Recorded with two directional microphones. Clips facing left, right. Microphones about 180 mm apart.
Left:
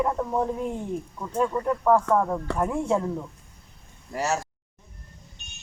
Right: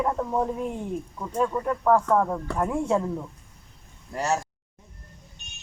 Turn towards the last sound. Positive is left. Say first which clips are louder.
# right 1 dB
turn(degrees=5)  # may be behind; listen again after turning